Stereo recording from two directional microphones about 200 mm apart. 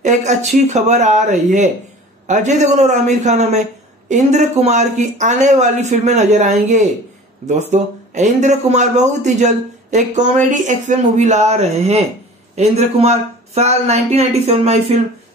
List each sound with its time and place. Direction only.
0.0 s a man's voice: 35° right (ahead or behind)